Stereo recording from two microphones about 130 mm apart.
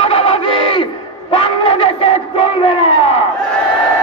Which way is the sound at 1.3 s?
40° left (ahead or behind).